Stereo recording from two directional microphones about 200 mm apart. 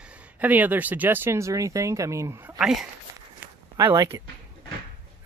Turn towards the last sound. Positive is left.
turn(degrees=-20)  # may be behind; listen again after turning